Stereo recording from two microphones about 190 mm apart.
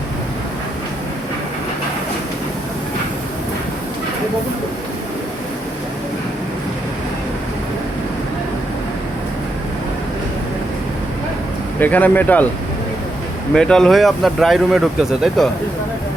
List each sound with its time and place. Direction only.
11.8 s speech: 10° left (ahead or behind)
13.5 s speech: 5° left (ahead or behind)